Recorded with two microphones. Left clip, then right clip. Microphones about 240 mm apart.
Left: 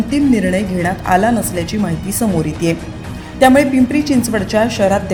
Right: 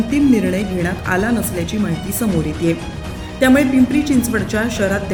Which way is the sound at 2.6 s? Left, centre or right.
Centre.